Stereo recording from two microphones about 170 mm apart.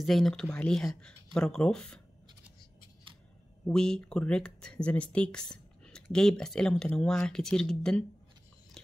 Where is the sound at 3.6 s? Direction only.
5° left (ahead or behind).